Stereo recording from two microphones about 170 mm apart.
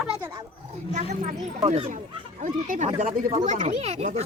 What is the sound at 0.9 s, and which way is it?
Speech, 45° right (ahead or behind).